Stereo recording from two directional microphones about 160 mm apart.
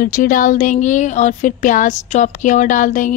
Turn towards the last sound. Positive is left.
turn(degrees=50)  # may be behind; listen again after turning